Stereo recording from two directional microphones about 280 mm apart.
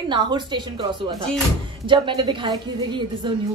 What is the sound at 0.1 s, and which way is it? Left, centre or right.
Speech, centre.